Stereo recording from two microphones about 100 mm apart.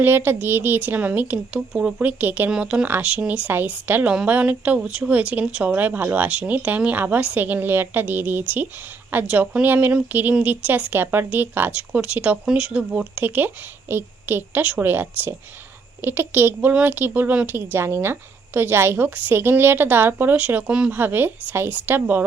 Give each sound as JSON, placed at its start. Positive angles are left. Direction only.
{"t": 0.0, "sound": "speech", "side_deg": -20}